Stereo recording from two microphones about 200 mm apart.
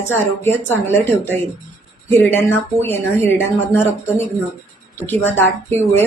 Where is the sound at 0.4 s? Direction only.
10° left (ahead or behind).